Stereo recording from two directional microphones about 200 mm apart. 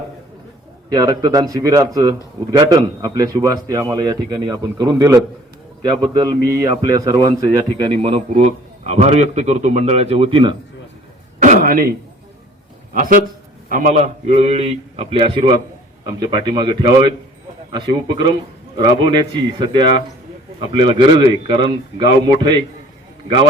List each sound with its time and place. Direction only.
0.9 s a man's voice: 20° right (ahead or behind)
11.3 s a sound: 40° right (ahead or behind)
12.9 s a man's voice: 45° right (ahead or behind); by 22.5 s 25° right (ahead or behind)